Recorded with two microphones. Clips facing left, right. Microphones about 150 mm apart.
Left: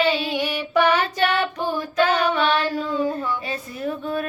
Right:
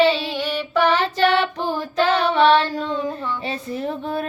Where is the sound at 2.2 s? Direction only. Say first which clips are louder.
Right 5 dB; 30° right (ahead or behind).